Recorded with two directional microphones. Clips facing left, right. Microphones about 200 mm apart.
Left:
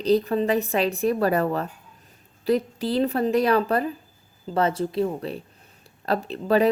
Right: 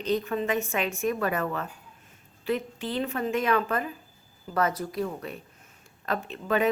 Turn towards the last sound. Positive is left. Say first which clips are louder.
# left 5 dB
turn(degrees=35)  # may be behind; listen again after turning